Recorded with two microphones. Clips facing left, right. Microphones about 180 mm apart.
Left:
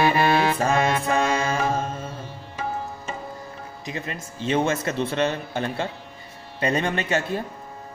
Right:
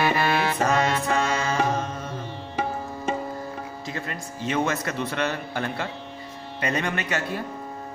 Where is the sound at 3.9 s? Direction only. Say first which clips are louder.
Left 3 dB; 20° left (ahead or behind).